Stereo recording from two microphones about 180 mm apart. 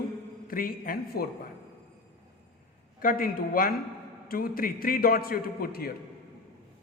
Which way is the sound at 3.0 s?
50° left (ahead or behind).